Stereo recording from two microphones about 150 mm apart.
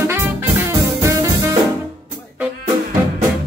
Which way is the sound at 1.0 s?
20° right (ahead or behind).